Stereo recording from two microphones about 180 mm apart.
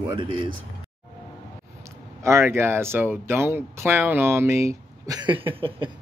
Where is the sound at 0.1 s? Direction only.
25° right (ahead or behind).